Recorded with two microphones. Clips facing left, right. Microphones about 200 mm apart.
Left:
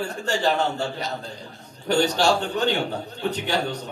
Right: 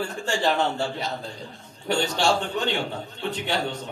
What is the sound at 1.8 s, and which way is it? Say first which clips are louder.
Speech: left 3 dB; 40° left (ahead or behind).